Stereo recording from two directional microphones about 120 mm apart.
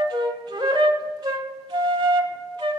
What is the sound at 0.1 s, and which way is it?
Flute, 35° right (ahead or behind).